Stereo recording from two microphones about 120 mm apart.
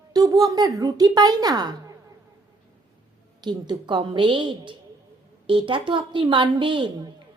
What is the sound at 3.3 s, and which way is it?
A woman's voice, 35° right (ahead or behind).